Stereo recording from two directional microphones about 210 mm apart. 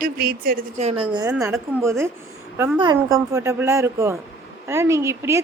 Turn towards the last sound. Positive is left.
turn(degrees=-15)  # may be behind; listen again after turning